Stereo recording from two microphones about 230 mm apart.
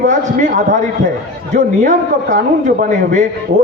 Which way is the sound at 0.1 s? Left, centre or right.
Right.